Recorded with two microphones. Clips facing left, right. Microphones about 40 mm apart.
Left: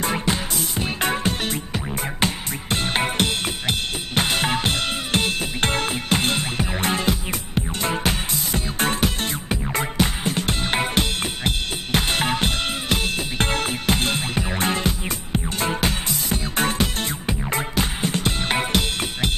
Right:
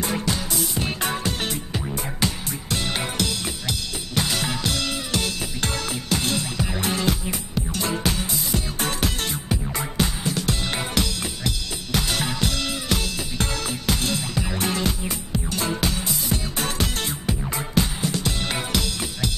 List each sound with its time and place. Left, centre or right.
0.0 s music: left